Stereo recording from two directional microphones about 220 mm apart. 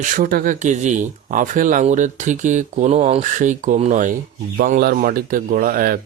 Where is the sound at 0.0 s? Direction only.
40° right (ahead or behind).